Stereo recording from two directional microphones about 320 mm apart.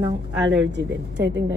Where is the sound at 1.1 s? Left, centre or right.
Right.